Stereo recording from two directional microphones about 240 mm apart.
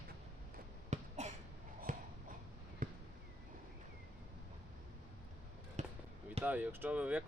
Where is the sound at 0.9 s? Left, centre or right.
Right.